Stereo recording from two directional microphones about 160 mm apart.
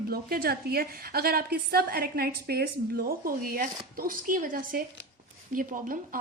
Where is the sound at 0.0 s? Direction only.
70° right (ahead or behind).